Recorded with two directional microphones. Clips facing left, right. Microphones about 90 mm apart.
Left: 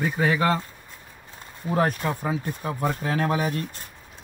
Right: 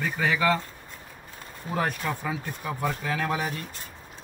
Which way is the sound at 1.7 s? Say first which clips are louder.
Left 4 dB; 35° left (ahead or behind).